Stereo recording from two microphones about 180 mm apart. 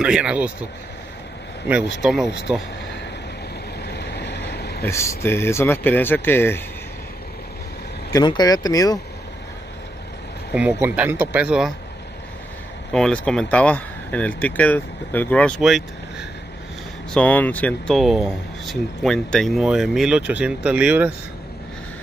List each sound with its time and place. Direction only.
0.0 s speech: 5° right (ahead or behind)
2.0 s speech: centre (ahead or behind)
3.8 s vehicle: 65° left (ahead or behind)
4.8 s speech: 15° left (ahead or behind)
8.1 s speech: 20° left (ahead or behind)
10.5 s speech: 5° right (ahead or behind)
12.9 s speech: 5° left (ahead or behind)